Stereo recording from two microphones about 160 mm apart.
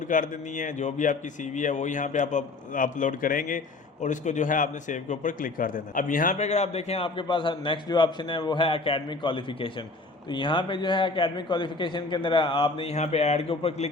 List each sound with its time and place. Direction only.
0.1 s a man's voice: 55° left (ahead or behind); by 13.8 s 35° left (ahead or behind)